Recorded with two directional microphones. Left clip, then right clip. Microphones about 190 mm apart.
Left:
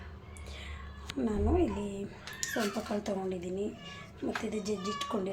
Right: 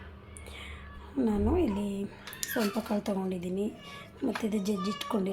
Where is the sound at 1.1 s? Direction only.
20° right (ahead or behind).